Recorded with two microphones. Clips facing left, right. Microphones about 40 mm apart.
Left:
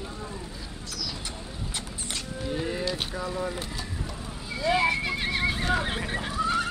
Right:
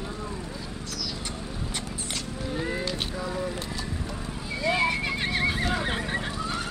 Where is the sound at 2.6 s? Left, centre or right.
Centre.